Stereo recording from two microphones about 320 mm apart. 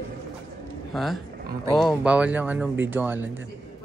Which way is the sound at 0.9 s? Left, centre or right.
Centre.